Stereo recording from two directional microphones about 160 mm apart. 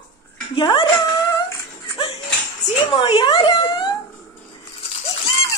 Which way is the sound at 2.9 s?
35° left (ahead or behind).